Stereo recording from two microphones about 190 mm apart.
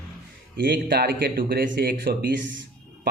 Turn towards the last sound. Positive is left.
turn(degrees=-70)  # may be behind; listen again after turning